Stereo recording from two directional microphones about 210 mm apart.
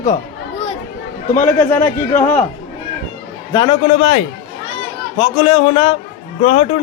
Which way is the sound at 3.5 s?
20° left (ahead or behind).